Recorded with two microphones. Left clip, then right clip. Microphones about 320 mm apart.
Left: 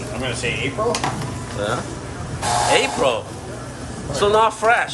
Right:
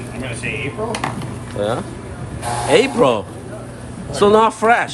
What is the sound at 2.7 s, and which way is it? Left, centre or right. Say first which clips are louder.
A man's voice: right 8 dB; centre.